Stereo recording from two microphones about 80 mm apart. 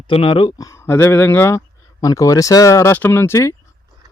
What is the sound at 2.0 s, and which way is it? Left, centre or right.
Speech, left.